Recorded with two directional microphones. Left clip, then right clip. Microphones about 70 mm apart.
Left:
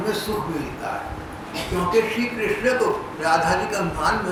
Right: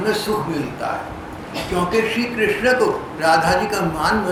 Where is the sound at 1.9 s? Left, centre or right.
Right.